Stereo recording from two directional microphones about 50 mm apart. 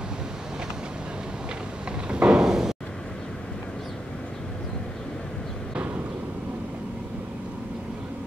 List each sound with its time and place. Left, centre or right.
2.0 s slam: right